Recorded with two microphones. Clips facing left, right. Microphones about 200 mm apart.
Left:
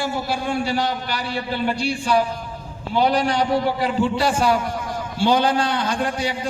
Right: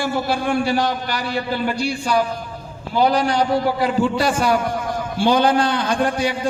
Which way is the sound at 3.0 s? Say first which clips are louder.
Right 2 dB; 35° right (ahead or behind).